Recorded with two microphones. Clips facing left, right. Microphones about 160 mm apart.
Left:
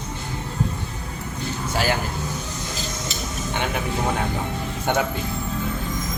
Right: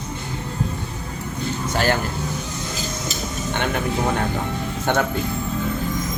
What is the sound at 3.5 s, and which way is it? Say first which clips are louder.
A man's voice: right 3 dB; 5° left (ahead or behind).